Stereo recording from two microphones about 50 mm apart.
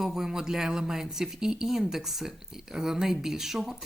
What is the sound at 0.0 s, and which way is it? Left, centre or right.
Speech, centre.